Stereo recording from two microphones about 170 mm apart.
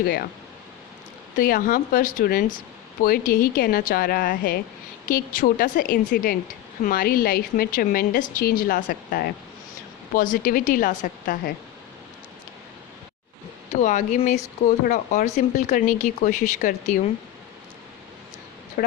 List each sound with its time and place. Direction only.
0.0 s a woman's voice: 60° left (ahead or behind)
1.4 s a woman's voice: 55° left (ahead or behind)
13.8 s speech: 45° left (ahead or behind)
18.8 s speech: 55° left (ahead or behind)